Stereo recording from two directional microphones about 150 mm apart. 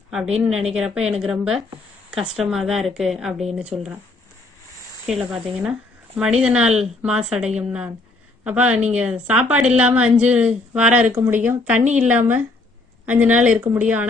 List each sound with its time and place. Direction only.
0.1 s speech: 5° right (ahead or behind)
5.0 s a woman's voice: 5° right (ahead or behind)